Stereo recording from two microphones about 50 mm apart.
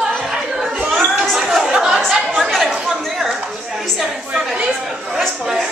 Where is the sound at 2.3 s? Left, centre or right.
Centre.